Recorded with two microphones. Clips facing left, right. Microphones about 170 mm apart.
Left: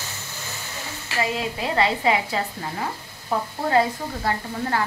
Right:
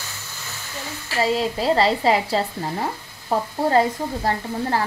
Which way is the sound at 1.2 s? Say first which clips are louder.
Right 6 dB; 35° right (ahead or behind).